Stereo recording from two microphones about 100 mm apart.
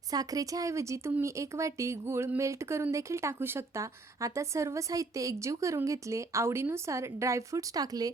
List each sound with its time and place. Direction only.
0.1 s speech: 40° right (ahead or behind)